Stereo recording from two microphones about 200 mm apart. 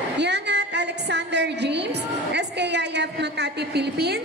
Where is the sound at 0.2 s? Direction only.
60° right (ahead or behind).